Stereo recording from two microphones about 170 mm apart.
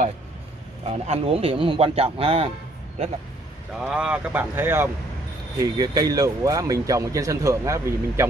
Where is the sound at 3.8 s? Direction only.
5° right (ahead or behind).